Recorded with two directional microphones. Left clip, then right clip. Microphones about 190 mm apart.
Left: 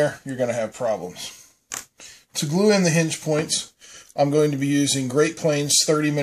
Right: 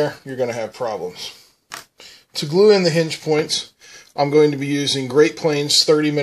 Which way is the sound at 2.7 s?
20° right (ahead or behind).